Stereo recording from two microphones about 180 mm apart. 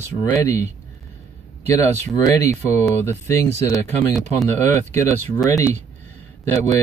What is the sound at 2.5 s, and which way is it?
Speech, 15° left (ahead or behind).